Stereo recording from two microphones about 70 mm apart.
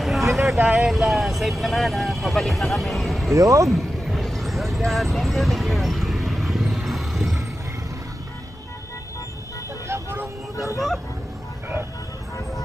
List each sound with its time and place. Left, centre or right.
0.0 s vehicle: centre
0.7 s speech: centre
3.3 s speech: right
3.6 s vehicle: centre
9.8 s vehicle: right